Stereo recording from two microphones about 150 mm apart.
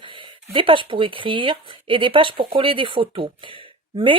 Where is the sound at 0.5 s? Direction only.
35° right (ahead or behind).